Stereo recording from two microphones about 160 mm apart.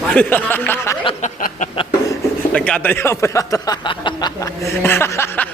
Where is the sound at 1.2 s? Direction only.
55° left (ahead or behind).